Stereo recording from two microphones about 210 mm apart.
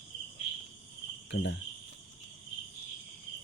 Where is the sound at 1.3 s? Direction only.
55° left (ahead or behind).